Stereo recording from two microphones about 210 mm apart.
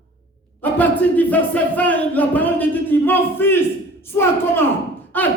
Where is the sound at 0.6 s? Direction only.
10° left (ahead or behind).